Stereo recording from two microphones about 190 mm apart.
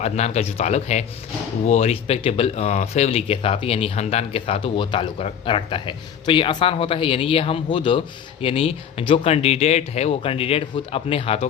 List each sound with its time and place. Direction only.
0.0 s speech: 35° left (ahead or behind)